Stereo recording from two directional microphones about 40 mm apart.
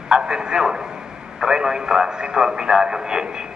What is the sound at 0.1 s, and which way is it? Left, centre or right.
A man's voice, centre.